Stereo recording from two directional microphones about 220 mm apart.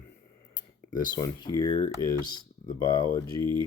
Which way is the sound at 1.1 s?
20° left (ahead or behind).